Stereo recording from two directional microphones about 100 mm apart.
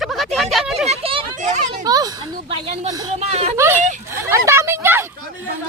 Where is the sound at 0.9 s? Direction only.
70° right (ahead or behind).